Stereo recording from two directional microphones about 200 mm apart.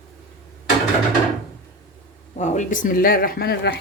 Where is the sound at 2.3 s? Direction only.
35° left (ahead or behind).